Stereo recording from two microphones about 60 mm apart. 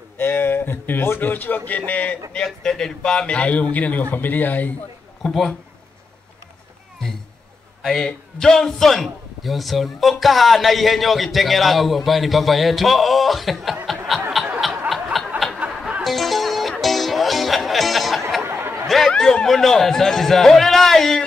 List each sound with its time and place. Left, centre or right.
0.2 s a man's voice: left
2.3 s a man's voice: centre; by 4.7 s left
5.2 s a man's voice: centre
7.8 s a man's voice: centre
14.3 s snicker: centre
15.1 s a sound: centre
16.0 s music: centre
18.4 s a sound: right
18.9 s a sound: centre
19.4 s a man's voice: centre